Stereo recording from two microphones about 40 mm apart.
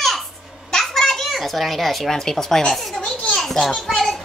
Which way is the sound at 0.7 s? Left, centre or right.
Centre.